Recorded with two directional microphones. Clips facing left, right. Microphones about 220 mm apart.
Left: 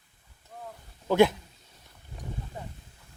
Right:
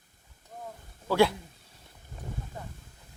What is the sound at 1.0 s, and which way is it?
Speech, 20° left (ahead or behind).